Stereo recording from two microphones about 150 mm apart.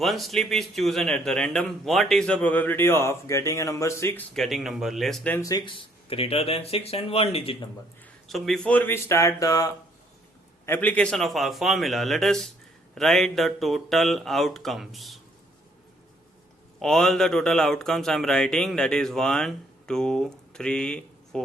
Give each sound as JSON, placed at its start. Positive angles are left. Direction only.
{"t": 0.0, "sound": "a man's voice", "side_deg": 0}
{"t": 4.4, "sound": "a man's voice", "side_deg": 0}
{"t": 5.4, "sound": "speech", "side_deg": 25}
{"t": 8.3, "sound": "speech", "side_deg": 0}
{"t": 10.7, "sound": "a man's voice", "side_deg": 10}
{"t": 16.8, "sound": "a man's voice", "side_deg": 5}